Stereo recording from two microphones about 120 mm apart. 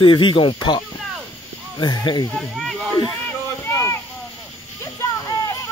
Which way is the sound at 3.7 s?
25° left (ahead or behind).